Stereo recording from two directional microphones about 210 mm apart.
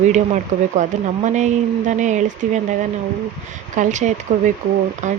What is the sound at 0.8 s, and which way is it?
A woman's voice, 35° right (ahead or behind).